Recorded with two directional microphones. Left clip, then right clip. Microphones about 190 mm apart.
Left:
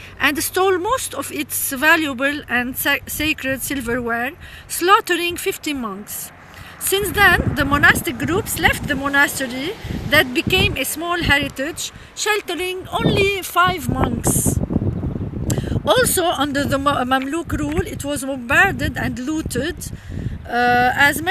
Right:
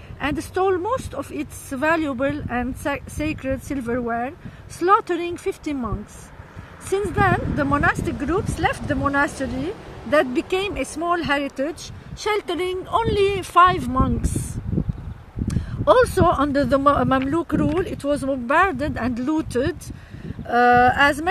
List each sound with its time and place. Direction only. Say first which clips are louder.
0.2 s speech: left 5 dB; 5° left (ahead or behind)
6.9 s speech: left 6 dB; 10° right (ahead or behind); by 13.9 s 30° right (ahead or behind)
15.4 s speech: right 1 dB; 25° right (ahead or behind)